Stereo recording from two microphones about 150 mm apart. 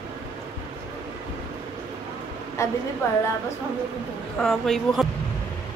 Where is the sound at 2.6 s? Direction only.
20° left (ahead or behind).